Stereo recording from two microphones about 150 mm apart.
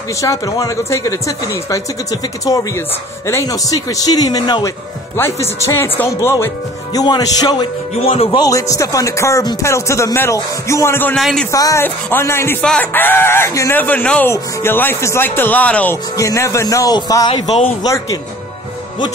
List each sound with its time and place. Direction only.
0.2 s speech: 25° left (ahead or behind)
8.0 s speech: 40° left (ahead or behind)
8.5 s speech: 20° left (ahead or behind)
11.1 s a man's voice: centre (ahead or behind)
11.5 s speech: 20° left (ahead or behind)
17.5 s speech: 40° left (ahead or behind)
17.8 s speech: 25° left (ahead or behind)